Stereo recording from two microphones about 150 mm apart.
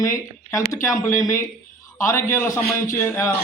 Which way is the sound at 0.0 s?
20° left (ahead or behind).